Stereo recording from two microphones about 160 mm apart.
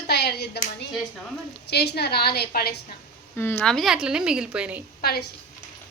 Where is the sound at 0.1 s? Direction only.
90° left.